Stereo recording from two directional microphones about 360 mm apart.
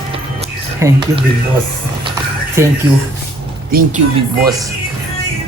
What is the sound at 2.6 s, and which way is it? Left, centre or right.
Speech, centre.